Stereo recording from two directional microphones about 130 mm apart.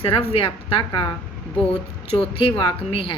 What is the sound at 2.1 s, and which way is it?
Speech, 45° left (ahead or behind).